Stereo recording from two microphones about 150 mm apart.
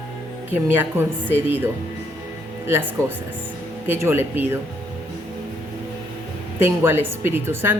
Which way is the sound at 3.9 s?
15° right (ahead or behind).